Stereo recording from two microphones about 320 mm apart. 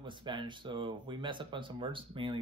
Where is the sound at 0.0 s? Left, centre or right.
Centre.